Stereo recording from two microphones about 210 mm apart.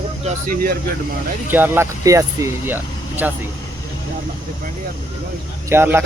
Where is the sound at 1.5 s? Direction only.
10° right (ahead or behind).